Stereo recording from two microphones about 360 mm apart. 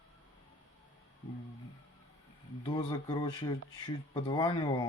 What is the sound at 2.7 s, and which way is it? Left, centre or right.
Speech, centre.